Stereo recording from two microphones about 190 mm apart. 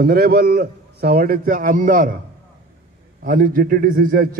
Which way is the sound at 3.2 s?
50° right (ahead or behind).